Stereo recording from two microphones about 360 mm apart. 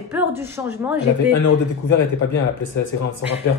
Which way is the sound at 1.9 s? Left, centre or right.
Left.